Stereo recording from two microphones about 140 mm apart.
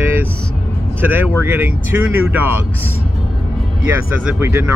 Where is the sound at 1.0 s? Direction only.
15° right (ahead or behind).